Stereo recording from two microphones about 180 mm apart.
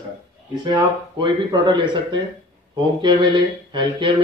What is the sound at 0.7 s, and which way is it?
Speech, 25° right (ahead or behind).